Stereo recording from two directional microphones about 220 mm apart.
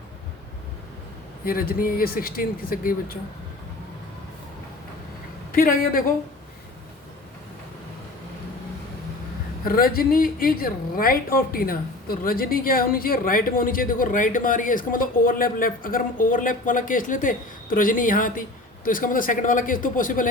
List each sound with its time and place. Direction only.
1.5 s a woman's voice: 40° left (ahead or behind)
5.5 s speech: 40° left (ahead or behind)
9.6 s a woman's voice: 40° left (ahead or behind)